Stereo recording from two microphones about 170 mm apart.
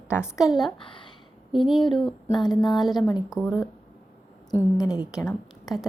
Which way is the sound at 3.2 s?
Centre (ahead or behind).